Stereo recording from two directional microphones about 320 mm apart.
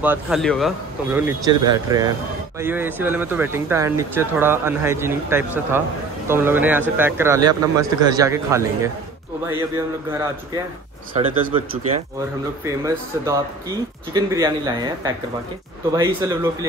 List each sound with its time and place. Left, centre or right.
0.0 s speech: centre
11.1 s speech: centre